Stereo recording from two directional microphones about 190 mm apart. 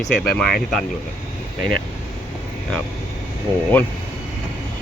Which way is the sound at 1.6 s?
50° left (ahead or behind).